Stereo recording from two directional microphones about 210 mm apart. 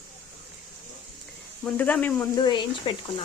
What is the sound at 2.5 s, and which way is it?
Speech, 20° left (ahead or behind).